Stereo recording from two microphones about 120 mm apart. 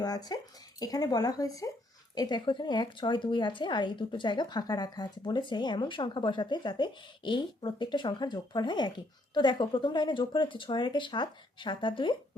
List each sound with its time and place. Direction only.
0.0 s speech: 35° left (ahead or behind)